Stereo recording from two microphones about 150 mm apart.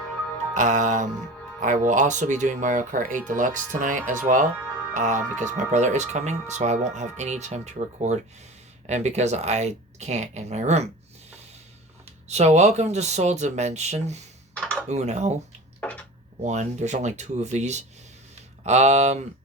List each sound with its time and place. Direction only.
0.5 s music: 55° right (ahead or behind)
1.6 s speech: 55° right (ahead or behind)
12.3 s speech: 50° right (ahead or behind)
14.5 s computer keyboard: 5° left (ahead or behind)
14.8 s speech: 50° right (ahead or behind)
15.8 s chopping: 10° left (ahead or behind)
16.4 s speech: 50° right (ahead or behind)